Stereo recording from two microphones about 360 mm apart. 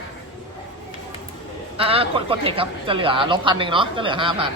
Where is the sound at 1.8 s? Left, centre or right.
Centre.